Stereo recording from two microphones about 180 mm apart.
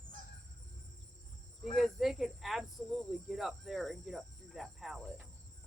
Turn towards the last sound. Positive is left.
turn(degrees=0)  # may be behind; listen again after turning